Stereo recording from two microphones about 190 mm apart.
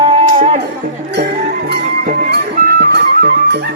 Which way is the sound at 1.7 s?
60° right (ahead or behind).